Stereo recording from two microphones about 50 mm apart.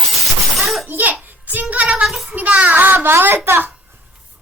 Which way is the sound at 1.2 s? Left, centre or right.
Right.